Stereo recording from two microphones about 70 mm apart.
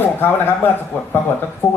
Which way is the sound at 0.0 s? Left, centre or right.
Left.